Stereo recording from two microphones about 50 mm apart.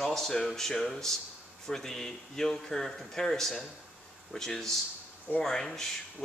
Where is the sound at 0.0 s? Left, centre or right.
Centre.